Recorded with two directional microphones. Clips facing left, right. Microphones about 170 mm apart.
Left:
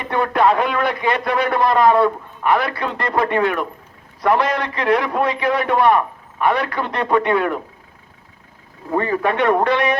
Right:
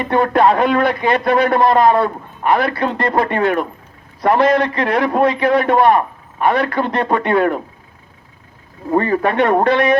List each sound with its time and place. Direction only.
0.1 s a man's voice: 30° right (ahead or behind)
9.0 s a man's voice: 40° right (ahead or behind)